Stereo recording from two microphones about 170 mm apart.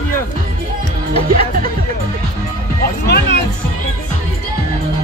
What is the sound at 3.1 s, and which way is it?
Music, 80° left.